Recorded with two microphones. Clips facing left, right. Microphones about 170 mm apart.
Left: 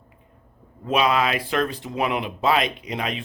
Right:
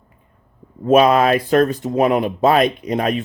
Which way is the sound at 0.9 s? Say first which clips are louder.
Right 9 dB; 45° right (ahead or behind).